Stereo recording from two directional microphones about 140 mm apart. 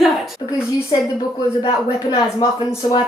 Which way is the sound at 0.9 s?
35° left (ahead or behind).